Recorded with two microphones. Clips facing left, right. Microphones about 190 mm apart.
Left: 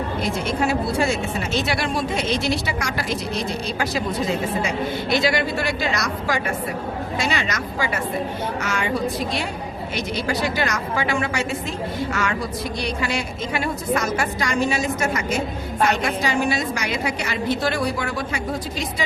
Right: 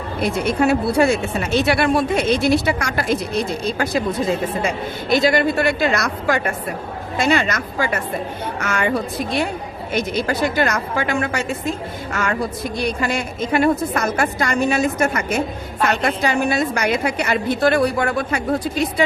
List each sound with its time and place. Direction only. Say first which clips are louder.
0.2 s a woman's voice: right 7 dB; 60° right (ahead or behind)
9.9 s a woman's voice: right 5 dB; 50° right (ahead or behind)